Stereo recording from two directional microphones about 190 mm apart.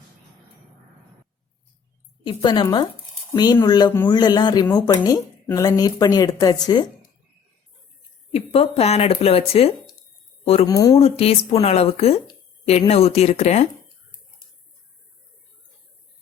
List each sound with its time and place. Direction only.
2.2 s speech: 25° left (ahead or behind)
8.3 s speech: 30° left (ahead or behind)
10.7 s speech: 20° left (ahead or behind)
10.9 s speech: 30° left (ahead or behind)